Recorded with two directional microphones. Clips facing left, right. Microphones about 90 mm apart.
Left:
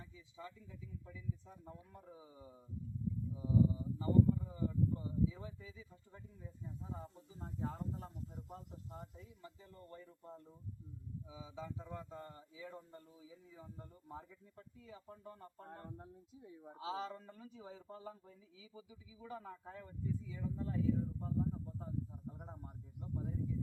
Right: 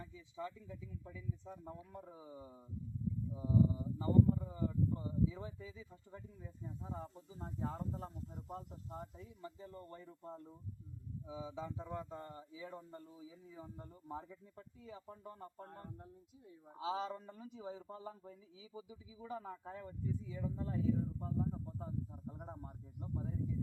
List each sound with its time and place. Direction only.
0.0 s a man's voice: 35° right (ahead or behind)
16.7 s a man's voice: 25° right (ahead or behind)